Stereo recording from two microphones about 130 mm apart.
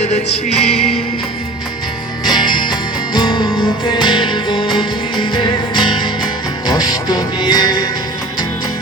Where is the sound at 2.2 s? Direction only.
35° left (ahead or behind).